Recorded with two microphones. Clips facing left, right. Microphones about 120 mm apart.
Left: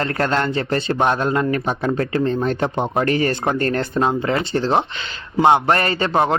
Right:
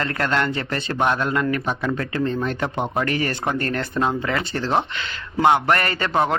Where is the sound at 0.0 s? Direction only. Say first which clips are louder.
Left 3 dB; 35° left (ahead or behind).